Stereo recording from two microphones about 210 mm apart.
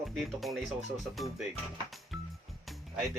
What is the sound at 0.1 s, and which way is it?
Speech, centre (ahead or behind).